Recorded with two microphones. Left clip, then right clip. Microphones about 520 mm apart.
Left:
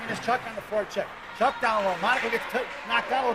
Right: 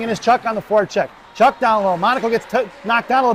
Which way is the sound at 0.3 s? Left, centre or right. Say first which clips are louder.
Right 12 dB; right.